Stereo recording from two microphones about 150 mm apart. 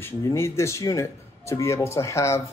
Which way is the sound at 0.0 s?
20° left (ahead or behind).